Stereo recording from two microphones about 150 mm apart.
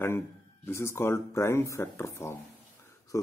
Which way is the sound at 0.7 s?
15° left (ahead or behind).